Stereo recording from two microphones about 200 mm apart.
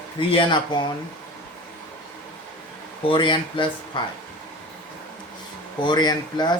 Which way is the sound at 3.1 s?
25° left (ahead or behind).